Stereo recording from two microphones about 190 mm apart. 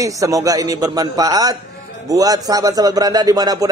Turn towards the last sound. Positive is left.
turn(degrees=-20)  # may be behind; listen again after turning